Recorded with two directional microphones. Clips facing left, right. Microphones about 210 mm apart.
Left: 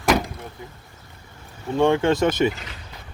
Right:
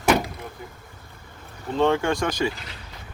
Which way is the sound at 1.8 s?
20° left (ahead or behind).